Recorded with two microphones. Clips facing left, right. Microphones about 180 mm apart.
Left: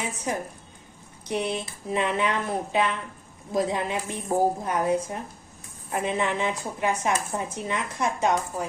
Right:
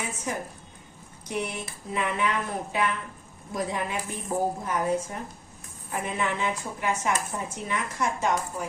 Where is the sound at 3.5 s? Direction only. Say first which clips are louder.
Left 4 dB; 25° left (ahead or behind).